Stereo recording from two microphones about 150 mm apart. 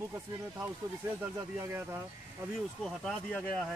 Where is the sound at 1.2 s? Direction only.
20° right (ahead or behind).